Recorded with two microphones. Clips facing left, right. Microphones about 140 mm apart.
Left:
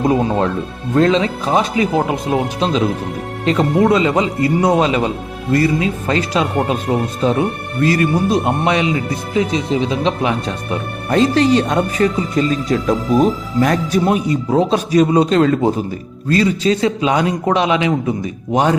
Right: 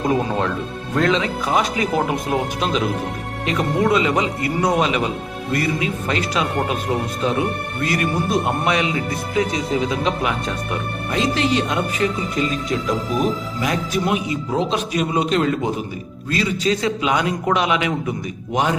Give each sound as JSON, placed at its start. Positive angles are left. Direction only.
{"t": 0.1, "sound": "speech", "side_deg": 30}
{"t": 7.8, "sound": "speech", "side_deg": 30}
{"t": 11.1, "sound": "speech", "side_deg": 40}